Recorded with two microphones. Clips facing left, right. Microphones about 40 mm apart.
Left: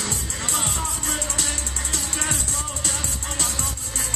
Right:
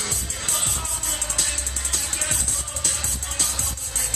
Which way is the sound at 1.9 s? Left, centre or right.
Left.